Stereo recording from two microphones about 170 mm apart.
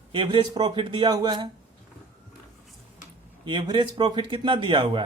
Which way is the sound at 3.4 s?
25° right (ahead or behind).